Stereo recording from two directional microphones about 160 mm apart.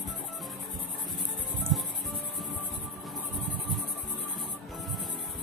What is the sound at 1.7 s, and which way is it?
Music, centre (ahead or behind).